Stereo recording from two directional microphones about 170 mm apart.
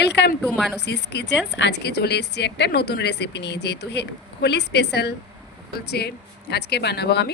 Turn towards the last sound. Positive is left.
turn(degrees=75)  # may be behind; listen again after turning